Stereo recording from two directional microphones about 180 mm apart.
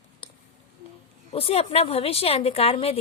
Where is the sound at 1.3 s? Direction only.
35° left (ahead or behind).